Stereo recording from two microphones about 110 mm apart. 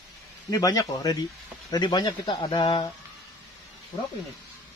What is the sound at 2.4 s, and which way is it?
Speech, 60° left (ahead or behind).